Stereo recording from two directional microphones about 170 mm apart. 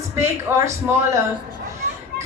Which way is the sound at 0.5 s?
15° right (ahead or behind).